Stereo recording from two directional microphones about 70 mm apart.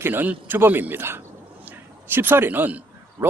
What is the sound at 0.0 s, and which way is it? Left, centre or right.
A man's voice, right.